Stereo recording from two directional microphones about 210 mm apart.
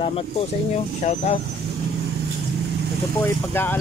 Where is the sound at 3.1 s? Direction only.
10° left (ahead or behind).